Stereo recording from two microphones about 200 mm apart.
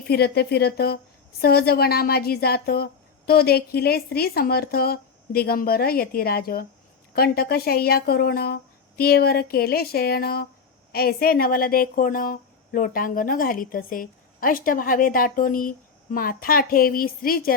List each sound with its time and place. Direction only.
0.1 s speech: 55° left (ahead or behind)